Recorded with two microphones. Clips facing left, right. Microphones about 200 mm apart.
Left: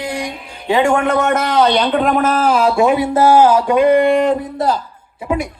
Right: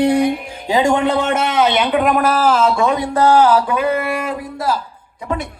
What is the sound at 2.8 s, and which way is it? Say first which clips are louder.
Speech: left 3 dB; 15° left (ahead or behind).